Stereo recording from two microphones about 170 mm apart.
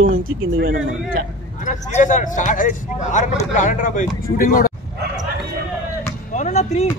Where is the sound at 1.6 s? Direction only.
50° left (ahead or behind).